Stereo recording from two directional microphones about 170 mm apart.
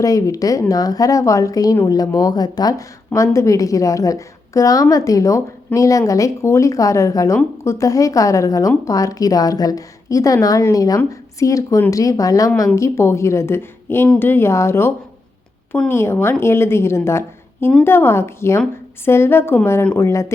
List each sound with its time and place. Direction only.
0.0 s a woman's voice: 20° left (ahead or behind)